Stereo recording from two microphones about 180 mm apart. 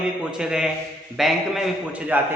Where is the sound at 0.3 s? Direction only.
5° right (ahead or behind).